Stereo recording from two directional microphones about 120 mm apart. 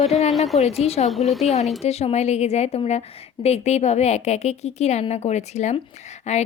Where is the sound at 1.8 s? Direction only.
60° left (ahead or behind).